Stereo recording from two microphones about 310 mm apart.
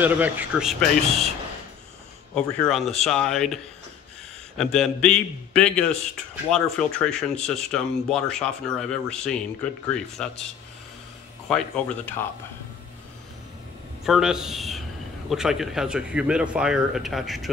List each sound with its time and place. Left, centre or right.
0.0 s speech: centre
2.3 s speech: centre
11.4 s speech: centre
14.0 s speech: centre